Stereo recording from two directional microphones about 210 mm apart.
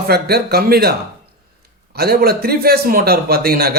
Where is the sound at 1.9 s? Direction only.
45° right (ahead or behind).